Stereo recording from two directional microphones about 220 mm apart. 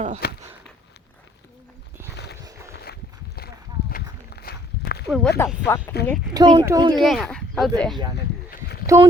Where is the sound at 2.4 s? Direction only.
15° right (ahead or behind).